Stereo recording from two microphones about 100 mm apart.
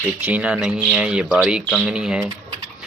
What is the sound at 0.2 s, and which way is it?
Speech, 15° right (ahead or behind).